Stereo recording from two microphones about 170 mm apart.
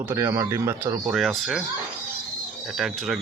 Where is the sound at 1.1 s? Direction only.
Centre (ahead or behind).